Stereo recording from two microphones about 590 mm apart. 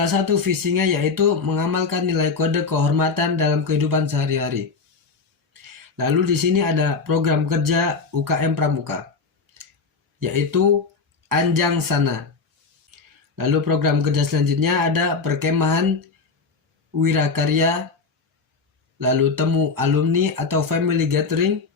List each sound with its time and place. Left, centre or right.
0.0 s speech: right
6.0 s speech: right
10.2 s speech: right
13.3 s speech: right
17.0 s speech: right
18.9 s speech: right